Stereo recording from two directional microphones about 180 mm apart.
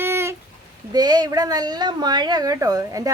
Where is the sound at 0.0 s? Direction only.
15° right (ahead or behind).